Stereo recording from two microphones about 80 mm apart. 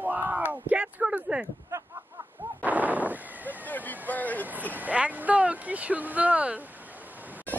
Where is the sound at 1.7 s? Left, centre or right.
Right.